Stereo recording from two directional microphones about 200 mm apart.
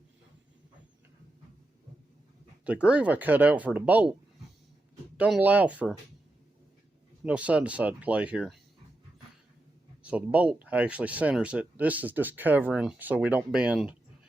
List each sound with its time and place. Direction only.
2.6 s speech: 5° right (ahead or behind)
5.1 s speech: 5° right (ahead or behind)
7.3 s speech: 5° right (ahead or behind)
10.0 s a sound: 5° right (ahead or behind)
10.3 s speech: 5° right (ahead or behind)